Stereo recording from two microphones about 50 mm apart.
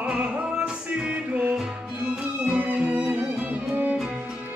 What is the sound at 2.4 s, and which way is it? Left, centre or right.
Music, right.